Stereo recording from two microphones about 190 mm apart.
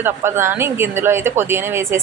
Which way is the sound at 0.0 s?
15° right (ahead or behind).